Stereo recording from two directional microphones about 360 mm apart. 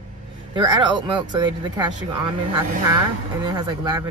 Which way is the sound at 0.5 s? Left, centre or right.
Centre.